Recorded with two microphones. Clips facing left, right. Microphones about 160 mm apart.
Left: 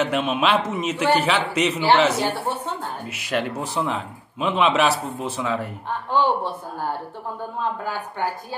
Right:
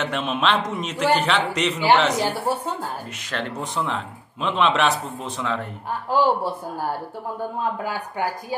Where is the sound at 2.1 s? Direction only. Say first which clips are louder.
Right 1 dB; 10° right (ahead or behind).